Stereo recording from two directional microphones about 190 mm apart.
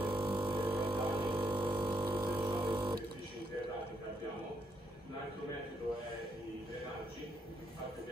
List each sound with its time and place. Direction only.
0.1 s didgeridoo: 25° right (ahead or behind)
1.5 s a sound: 25° right (ahead or behind)
2.1 s didgeridoo: 25° right (ahead or behind)